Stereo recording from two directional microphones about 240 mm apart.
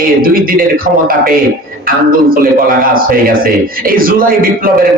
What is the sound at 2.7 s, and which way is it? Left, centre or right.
A man's voice, right.